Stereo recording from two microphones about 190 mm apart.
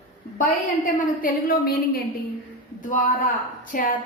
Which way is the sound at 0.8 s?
45° left (ahead or behind).